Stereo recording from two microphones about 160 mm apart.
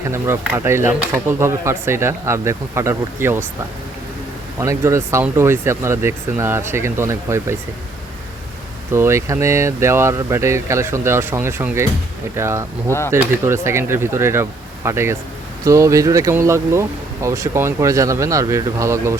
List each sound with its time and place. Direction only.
0.1 s speech: 15° right (ahead or behind)
4.6 s speech: 20° right (ahead or behind)
8.9 s speech: 15° right (ahead or behind)